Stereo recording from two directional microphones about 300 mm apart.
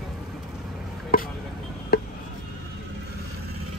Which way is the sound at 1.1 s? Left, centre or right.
Left.